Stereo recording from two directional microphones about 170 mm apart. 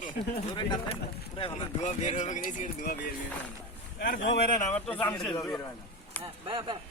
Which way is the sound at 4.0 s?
75° left (ahead or behind).